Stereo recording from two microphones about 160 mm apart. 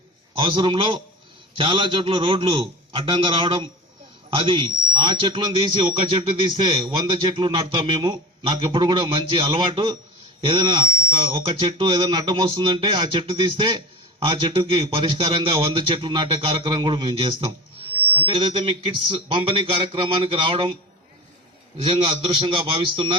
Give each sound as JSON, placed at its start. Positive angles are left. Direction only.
{"t": 0.3, "sound": "a man's voice", "side_deg": -30}
{"t": 21.8, "sound": "speech", "side_deg": -30}